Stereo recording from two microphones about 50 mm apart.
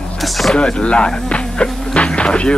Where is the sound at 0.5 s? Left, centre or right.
Left.